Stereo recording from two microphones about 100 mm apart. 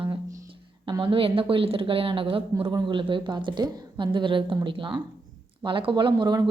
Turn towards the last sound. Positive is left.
turn(degrees=-50)  # may be behind; listen again after turning